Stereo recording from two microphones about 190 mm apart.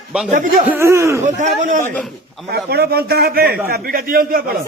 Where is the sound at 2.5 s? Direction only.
60° right (ahead or behind).